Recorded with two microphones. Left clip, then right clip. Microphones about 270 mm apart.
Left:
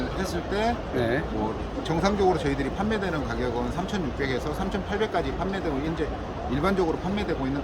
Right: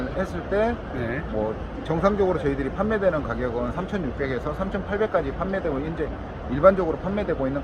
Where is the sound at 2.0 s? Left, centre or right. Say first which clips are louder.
Right 2 dB; right.